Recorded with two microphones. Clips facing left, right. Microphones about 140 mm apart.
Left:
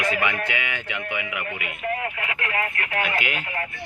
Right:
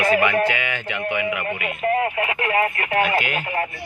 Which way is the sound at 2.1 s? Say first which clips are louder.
Right 7 dB; 25° right (ahead or behind).